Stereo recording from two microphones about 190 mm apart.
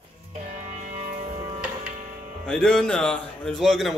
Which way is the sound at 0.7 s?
40° right (ahead or behind).